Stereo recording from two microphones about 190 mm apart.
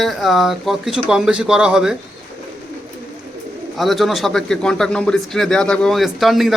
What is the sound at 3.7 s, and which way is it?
Speech, centre (ahead or behind).